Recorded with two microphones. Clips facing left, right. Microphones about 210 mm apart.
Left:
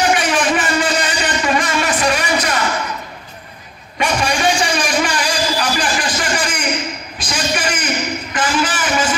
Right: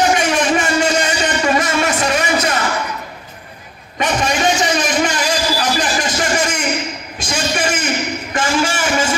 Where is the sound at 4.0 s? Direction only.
20° right (ahead or behind).